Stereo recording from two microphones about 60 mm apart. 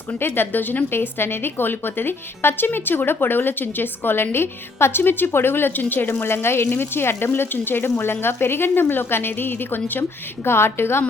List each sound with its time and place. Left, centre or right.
0.1 s a woman's voice: left